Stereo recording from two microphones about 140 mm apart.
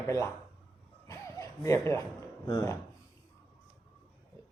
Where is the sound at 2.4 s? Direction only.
25° left (ahead or behind).